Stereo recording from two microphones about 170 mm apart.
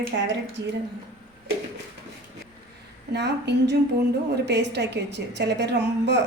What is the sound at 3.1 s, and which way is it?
A woman's voice, 90° right.